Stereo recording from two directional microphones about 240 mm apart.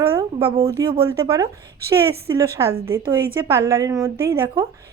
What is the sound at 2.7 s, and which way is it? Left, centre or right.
Speech, right.